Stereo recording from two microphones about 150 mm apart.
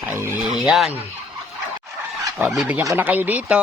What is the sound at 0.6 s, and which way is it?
Fowl, centre (ahead or behind).